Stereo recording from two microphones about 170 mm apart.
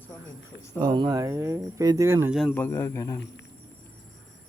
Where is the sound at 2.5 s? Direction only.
15° left (ahead or behind).